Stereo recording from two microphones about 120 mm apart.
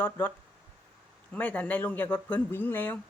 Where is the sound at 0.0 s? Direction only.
15° left (ahead or behind).